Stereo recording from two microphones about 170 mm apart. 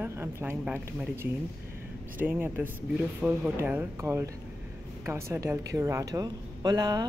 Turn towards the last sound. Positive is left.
turn(degrees=-20)  # may be behind; listen again after turning